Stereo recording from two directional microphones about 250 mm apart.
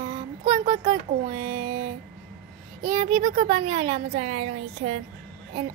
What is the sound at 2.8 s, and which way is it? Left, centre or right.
Speech, right.